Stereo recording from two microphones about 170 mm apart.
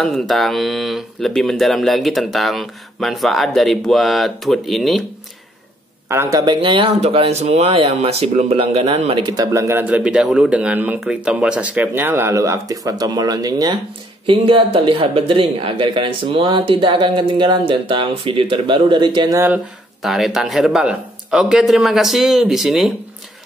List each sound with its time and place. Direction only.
0.0 s speech: centre (ahead or behind)
6.0 s speech: 20° right (ahead or behind)
19.3 s speech: 15° right (ahead or behind)
20.0 s speech: centre (ahead or behind)